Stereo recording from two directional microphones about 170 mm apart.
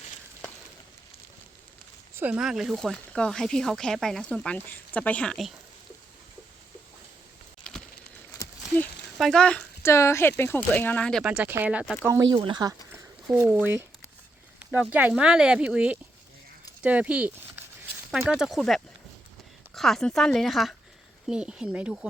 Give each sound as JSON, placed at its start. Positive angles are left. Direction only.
{"t": 2.1, "sound": "speech", "side_deg": -10}
{"t": 8.3, "sound": "a sound", "side_deg": 15}
{"t": 9.1, "sound": "speech", "side_deg": 0}
{"t": 9.8, "sound": "speech", "side_deg": 15}
{"t": 11.2, "sound": "speech", "side_deg": -5}
{"t": 12.3, "sound": "speech", "side_deg": -25}
{"t": 13.5, "sound": "speech", "side_deg": -10}